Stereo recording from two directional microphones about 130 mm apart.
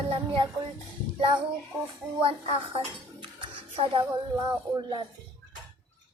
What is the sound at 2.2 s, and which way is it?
A child's voice, 45° right (ahead or behind).